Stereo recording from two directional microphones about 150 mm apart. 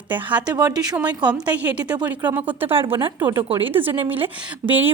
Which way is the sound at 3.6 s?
15° right (ahead or behind).